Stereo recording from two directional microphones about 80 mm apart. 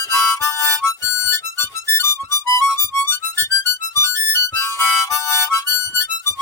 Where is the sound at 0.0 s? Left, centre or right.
Left.